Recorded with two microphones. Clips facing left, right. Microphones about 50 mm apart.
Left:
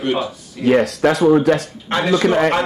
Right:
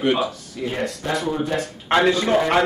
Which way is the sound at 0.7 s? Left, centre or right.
Left.